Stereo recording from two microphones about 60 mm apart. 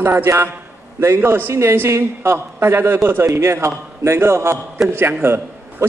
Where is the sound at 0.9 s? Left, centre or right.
Right.